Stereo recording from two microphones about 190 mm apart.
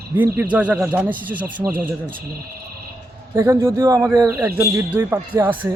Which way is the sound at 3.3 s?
15° right (ahead or behind).